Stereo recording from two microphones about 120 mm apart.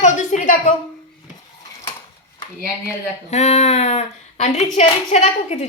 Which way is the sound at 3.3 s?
70° left (ahead or behind).